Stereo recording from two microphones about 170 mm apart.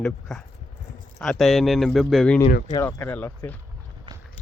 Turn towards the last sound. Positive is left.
turn(degrees=10)  # may be behind; listen again after turning